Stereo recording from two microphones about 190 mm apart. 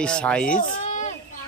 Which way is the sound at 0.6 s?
40° left (ahead or behind).